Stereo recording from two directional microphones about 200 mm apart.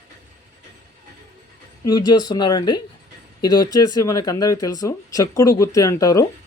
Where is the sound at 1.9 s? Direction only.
20° left (ahead or behind).